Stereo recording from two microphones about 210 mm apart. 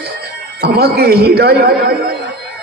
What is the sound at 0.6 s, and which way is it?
A man's voice, 50° right (ahead or behind).